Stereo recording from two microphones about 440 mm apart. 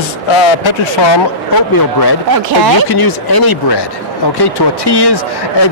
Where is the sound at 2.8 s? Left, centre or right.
Left.